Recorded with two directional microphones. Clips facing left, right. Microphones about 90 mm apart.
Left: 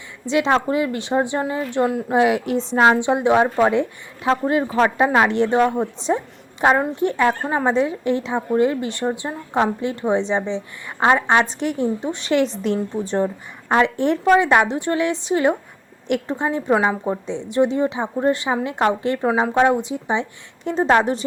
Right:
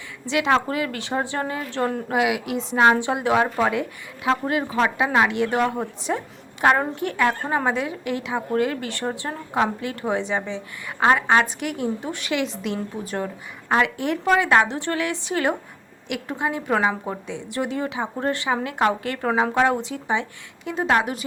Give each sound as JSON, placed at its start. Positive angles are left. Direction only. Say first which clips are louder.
{"t": 0.3, "sound": "speech", "louder": "left 3 dB", "side_deg": 25}
{"t": 2.1, "sound": "a woman's voice", "louder": "left 6 dB", "side_deg": 35}
{"t": 2.8, "sound": "a woman's voice", "louder": "left 2 dB", "side_deg": 20}
{"t": 5.7, "sound": "speech", "louder": "left 5 dB", "side_deg": 20}
{"t": 11.6, "sound": "speech", "louder": "left 5 dB", "side_deg": 30}
{"t": 12.6, "sound": "a woman's voice", "louder": "left 6 dB", "side_deg": 30}
{"t": 14.3, "sound": "speech", "louder": "left 2 dB", "side_deg": 20}
{"t": 16.7, "sound": "a woman's voice", "louder": "left 3 dB", "side_deg": 10}
{"t": 17.2, "sound": "speech", "louder": "left 10 dB", "side_deg": 25}
{"t": 20.7, "sound": "a woman's voice", "louder": "left 5 dB", "side_deg": 30}